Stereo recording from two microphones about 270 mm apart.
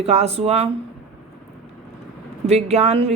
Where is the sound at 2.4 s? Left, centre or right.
Right.